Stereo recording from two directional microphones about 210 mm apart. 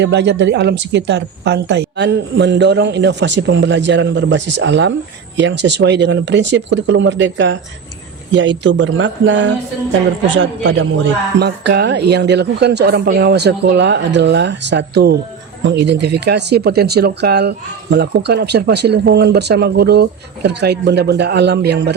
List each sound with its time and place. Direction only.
0.0 s a man's voice: 55° right (ahead or behind)